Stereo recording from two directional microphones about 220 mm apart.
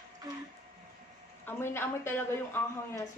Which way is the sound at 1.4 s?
10° left (ahead or behind).